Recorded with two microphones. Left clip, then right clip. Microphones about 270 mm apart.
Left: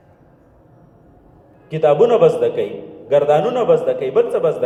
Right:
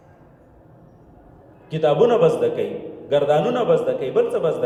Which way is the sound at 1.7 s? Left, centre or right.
Centre.